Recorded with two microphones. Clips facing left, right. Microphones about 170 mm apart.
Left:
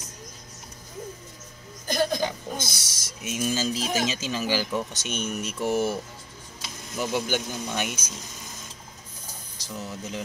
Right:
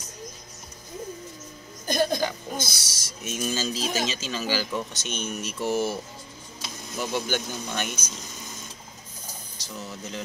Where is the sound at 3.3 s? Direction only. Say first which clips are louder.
Left 2 dB; 10° left (ahead or behind).